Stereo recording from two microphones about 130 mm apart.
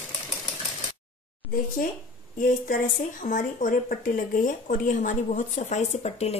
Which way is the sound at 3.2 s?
75° left (ahead or behind).